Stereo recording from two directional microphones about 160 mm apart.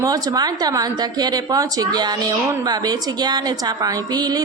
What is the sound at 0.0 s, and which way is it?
A woman's voice, 25° right (ahead or behind).